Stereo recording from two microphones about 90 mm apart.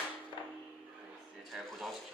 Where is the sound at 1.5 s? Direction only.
Centre (ahead or behind).